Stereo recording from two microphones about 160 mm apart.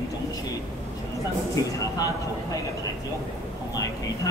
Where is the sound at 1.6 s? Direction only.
20° left (ahead or behind).